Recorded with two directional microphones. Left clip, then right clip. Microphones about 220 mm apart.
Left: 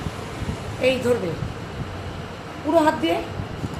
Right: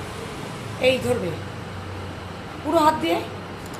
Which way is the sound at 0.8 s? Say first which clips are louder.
Right 1 dB; 15° left (ahead or behind).